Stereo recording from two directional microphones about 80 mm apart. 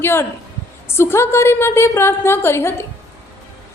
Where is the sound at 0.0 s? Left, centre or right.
Left.